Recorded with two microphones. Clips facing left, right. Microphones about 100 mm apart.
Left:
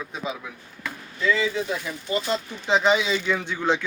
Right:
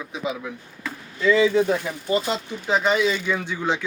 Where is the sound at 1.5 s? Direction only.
50° right (ahead or behind).